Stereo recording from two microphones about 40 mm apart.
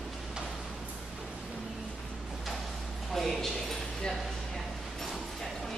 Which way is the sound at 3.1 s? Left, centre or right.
Centre.